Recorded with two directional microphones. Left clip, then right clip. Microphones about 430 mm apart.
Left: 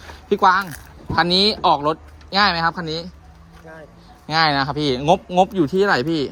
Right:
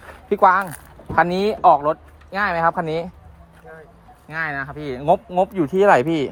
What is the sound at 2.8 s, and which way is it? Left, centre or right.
Speech, centre.